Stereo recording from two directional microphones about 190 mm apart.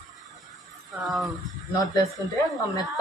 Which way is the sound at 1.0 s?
Centre (ahead or behind).